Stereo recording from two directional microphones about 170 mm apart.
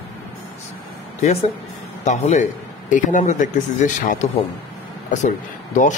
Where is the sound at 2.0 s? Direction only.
40° left (ahead or behind).